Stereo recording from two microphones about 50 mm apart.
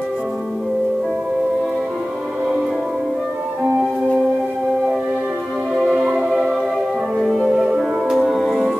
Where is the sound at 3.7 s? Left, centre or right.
Centre.